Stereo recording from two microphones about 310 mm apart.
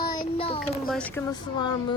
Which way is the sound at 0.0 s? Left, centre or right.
Centre.